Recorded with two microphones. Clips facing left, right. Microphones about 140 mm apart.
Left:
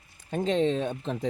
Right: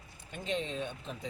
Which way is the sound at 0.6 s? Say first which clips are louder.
Left 12 dB; 30° left (ahead or behind).